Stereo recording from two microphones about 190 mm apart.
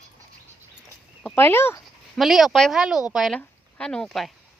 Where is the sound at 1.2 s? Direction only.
10° left (ahead or behind).